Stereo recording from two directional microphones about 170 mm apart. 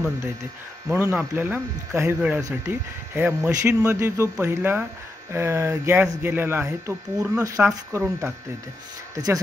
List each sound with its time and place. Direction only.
0.8 s speech: 10° right (ahead or behind)